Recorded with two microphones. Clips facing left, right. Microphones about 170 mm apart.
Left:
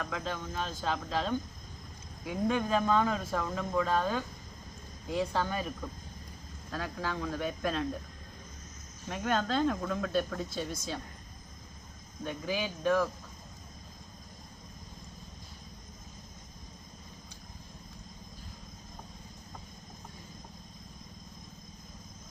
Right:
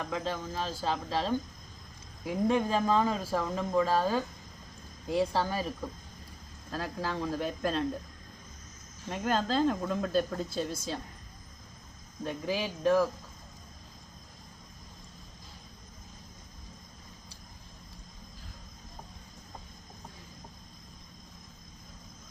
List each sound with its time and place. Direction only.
0.0 s speech: 30° right (ahead or behind)
6.7 s speech: 35° right (ahead or behind)
9.0 s a woman's voice: 30° right (ahead or behind)
12.2 s speech: 35° right (ahead or behind)